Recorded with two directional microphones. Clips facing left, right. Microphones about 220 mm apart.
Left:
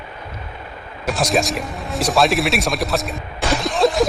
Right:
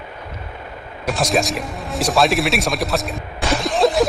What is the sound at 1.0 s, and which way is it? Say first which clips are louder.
Speech: even; centre (ahead or behind).